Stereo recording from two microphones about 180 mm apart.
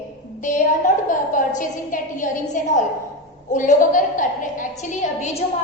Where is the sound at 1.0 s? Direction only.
45° left (ahead or behind).